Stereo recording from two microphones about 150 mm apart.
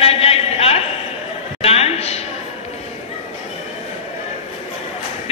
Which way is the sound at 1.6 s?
45° left (ahead or behind).